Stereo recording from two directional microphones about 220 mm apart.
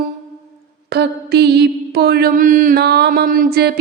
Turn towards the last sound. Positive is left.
turn(degrees=-45)  # may be behind; listen again after turning